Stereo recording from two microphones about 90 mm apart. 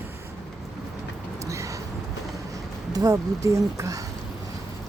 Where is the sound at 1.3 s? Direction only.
35° right (ahead or behind).